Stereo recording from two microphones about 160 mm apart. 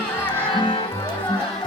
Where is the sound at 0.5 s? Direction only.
30° left (ahead or behind).